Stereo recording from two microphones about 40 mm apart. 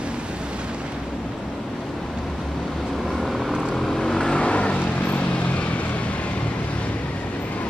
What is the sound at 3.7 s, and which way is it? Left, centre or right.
Vehicle, centre.